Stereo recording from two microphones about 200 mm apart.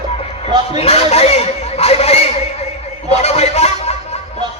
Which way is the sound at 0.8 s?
30° left (ahead or behind).